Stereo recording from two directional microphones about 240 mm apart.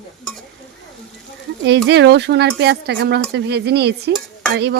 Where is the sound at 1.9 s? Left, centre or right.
Right.